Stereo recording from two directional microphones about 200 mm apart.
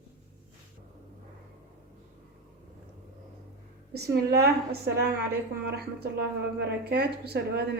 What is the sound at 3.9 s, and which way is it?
A woman's voice, 55° right (ahead or behind).